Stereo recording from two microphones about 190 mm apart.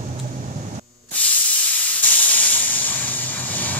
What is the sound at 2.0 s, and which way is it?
Steam, 10° left (ahead or behind).